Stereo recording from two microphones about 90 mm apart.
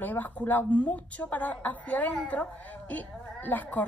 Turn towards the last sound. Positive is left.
turn(degrees=20)  # may be behind; listen again after turning